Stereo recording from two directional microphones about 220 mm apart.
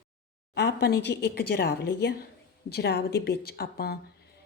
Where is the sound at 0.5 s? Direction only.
50° left (ahead or behind).